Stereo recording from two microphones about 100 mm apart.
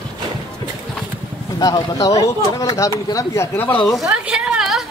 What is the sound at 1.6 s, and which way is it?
Speech, 35° left (ahead or behind).